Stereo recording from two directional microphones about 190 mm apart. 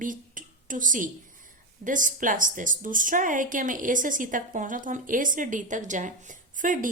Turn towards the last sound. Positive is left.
turn(degrees=-45)  # may be behind; listen again after turning